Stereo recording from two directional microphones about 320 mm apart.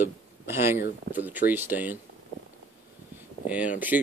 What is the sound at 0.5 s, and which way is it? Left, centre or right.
Speech, centre.